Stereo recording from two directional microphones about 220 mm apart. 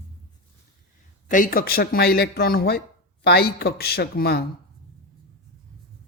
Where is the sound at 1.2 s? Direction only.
35° left (ahead or behind).